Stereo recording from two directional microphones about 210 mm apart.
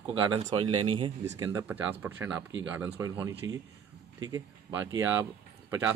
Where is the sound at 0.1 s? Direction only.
25° right (ahead or behind).